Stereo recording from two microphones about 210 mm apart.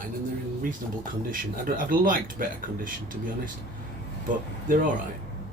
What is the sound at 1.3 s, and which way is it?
Speech, 40° right (ahead or behind).